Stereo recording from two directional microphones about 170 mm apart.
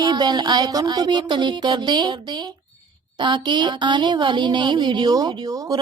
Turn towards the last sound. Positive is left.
turn(degrees=-20)  # may be behind; listen again after turning